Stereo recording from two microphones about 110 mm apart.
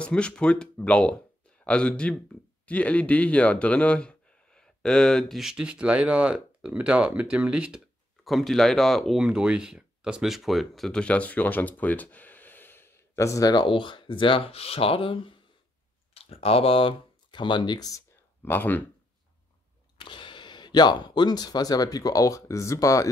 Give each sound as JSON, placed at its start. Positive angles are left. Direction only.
{"t": 0.0, "sound": "speech", "side_deg": 10}
{"t": 8.2, "sound": "speech", "side_deg": 0}
{"t": 13.7, "sound": "speech", "side_deg": 50}
{"t": 18.4, "sound": "speech", "side_deg": 15}
{"t": 20.0, "sound": "speech", "side_deg": 50}